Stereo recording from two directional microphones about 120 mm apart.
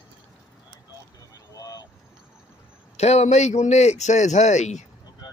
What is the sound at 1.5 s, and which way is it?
Vehicle, 30° left (ahead or behind).